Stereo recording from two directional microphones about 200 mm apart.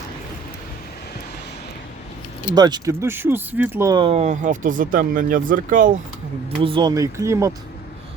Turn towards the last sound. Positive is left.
turn(degrees=-15)  # may be behind; listen again after turning